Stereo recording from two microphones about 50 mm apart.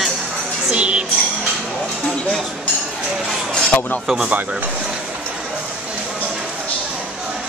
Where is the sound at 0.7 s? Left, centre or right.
Right.